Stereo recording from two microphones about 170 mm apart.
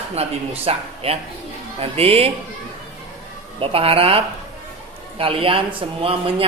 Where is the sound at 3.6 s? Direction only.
35° right (ahead or behind).